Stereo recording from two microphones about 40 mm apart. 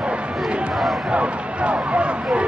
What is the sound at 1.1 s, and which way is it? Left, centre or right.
Speech, right.